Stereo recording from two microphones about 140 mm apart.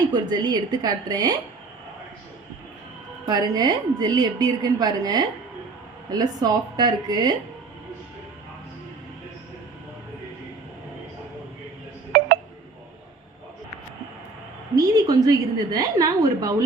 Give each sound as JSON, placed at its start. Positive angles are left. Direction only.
{"t": 0.1, "sound": "a woman's voice", "side_deg": -30}
{"t": 3.2, "sound": "a woman's voice", "side_deg": -30}
{"t": 14.8, "sound": "a woman's voice", "side_deg": -25}